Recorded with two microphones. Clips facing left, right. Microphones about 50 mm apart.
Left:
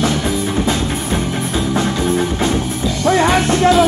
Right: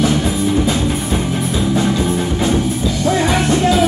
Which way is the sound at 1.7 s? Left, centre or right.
Left.